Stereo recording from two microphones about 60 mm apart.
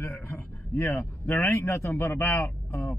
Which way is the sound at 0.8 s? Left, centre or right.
Left.